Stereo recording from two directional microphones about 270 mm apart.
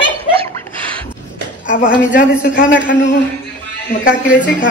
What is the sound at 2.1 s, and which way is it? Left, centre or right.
Speech, left.